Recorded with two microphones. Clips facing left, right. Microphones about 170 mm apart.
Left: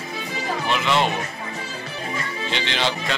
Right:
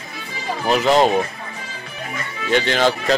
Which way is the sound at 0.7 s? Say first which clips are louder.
Right 7 dB; 40° right (ahead or behind).